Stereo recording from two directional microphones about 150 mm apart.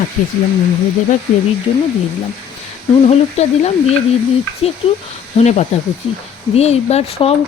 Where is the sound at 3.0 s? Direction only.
45° left (ahead or behind).